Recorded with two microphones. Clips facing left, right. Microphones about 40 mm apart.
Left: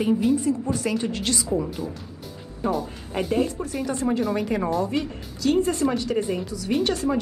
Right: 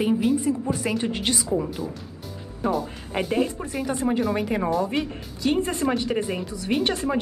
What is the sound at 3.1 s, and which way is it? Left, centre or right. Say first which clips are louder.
Speech: even; centre.